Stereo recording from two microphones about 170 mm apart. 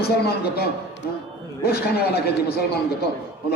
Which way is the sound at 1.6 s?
65° left (ahead or behind).